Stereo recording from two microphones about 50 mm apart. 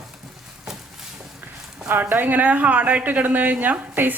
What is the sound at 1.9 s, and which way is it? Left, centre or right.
Speech, right.